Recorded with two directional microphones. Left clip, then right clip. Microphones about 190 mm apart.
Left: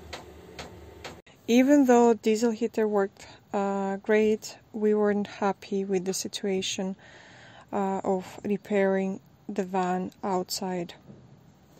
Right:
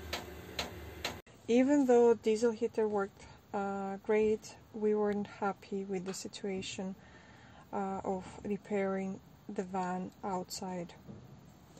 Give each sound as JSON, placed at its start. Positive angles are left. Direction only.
{"t": 1.4, "sound": "speech", "side_deg": 45}